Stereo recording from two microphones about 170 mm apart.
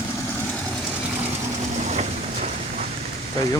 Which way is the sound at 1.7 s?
40° right (ahead or behind).